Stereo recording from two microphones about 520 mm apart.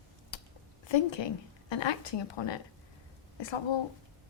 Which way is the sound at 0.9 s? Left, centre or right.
Left.